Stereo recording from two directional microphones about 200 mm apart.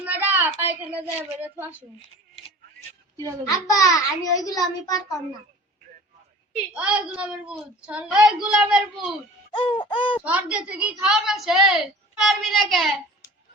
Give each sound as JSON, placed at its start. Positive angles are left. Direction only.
{"t": 0.0, "sound": "a sound", "side_deg": -10}
{"t": 3.4, "sound": "a child's voice", "side_deg": 15}
{"t": 6.7, "sound": "a woman's voice", "side_deg": -5}
{"t": 9.5, "sound": "wail", "side_deg": 25}
{"t": 9.9, "sound": "speech", "side_deg": 25}
{"t": 10.2, "sound": "a woman's voice", "side_deg": -5}